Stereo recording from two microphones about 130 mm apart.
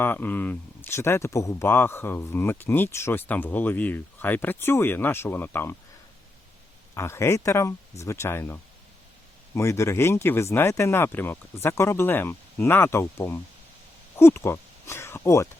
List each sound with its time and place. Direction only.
0.0 s speech: 15° left (ahead or behind)
6.9 s speech: 20° left (ahead or behind)